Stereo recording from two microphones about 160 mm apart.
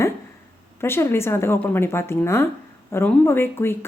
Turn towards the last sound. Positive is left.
turn(degrees=15)  # may be behind; listen again after turning